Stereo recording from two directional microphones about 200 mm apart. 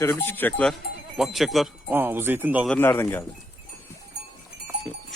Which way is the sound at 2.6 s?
10° left (ahead or behind).